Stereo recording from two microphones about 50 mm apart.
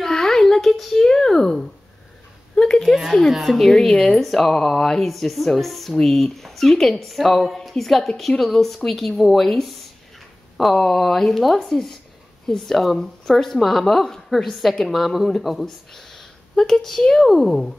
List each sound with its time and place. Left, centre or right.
0.0 s a sound: centre
2.8 s speech: centre
3.9 s speech: left
4.2 s speech: centre